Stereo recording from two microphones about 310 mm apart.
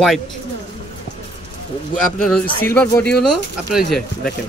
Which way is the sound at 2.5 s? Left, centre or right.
Centre.